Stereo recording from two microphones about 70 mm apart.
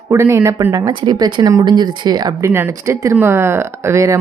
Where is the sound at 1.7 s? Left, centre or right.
Right.